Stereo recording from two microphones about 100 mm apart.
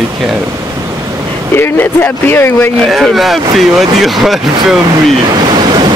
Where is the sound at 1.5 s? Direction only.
20° left (ahead or behind).